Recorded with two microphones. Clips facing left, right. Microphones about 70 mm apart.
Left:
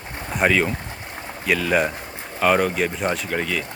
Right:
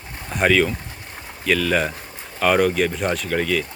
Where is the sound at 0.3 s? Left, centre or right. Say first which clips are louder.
Right 1 dB; centre.